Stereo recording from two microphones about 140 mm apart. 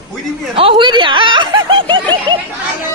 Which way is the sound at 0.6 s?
40° right (ahead or behind).